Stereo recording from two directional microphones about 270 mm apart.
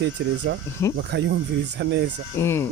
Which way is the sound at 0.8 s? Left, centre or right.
Centre.